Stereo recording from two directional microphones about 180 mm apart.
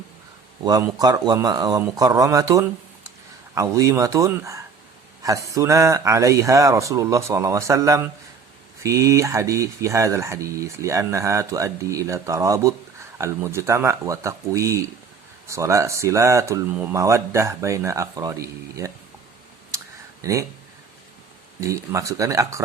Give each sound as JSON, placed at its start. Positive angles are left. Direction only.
{"t": 0.6, "sound": "speech", "side_deg": -20}
{"t": 20.2, "sound": "speech", "side_deg": -20}
{"t": 21.6, "sound": "speech", "side_deg": -15}